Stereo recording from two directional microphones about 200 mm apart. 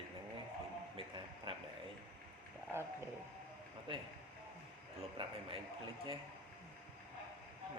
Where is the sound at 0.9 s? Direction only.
25° right (ahead or behind).